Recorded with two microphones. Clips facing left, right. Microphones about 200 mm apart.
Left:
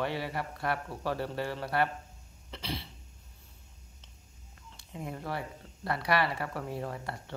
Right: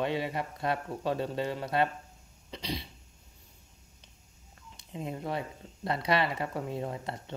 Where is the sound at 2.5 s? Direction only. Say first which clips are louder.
Right 2 dB; 15° right (ahead or behind).